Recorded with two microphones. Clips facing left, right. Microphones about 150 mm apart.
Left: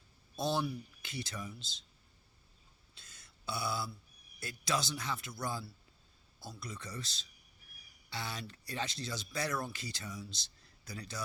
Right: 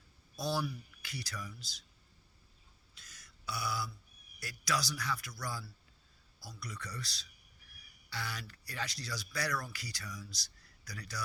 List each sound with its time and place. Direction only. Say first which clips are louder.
0.3 s speech: left 2 dB; 25° left (ahead or behind)
2.9 s a sound: right 1 dB; 25° left (ahead or behind)
4.4 s speech: left 1 dB; 25° left (ahead or behind)